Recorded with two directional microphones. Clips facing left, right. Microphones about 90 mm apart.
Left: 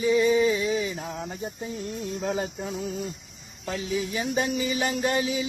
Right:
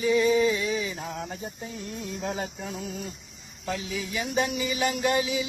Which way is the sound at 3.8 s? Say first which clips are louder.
Left 4 dB; 35° left (ahead or behind).